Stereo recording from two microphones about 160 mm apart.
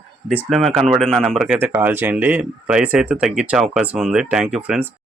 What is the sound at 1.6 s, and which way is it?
Speech, 10° right (ahead or behind).